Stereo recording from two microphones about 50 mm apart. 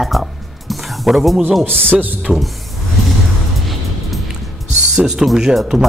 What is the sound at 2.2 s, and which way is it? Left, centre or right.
Speech, centre.